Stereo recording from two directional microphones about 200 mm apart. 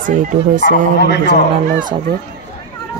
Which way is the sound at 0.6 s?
55° left (ahead or behind).